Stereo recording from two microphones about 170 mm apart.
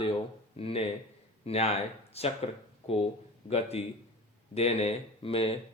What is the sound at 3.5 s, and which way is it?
Speech, 40° left (ahead or behind).